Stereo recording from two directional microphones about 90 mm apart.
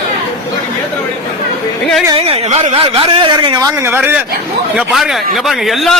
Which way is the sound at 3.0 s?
65° right (ahead or behind).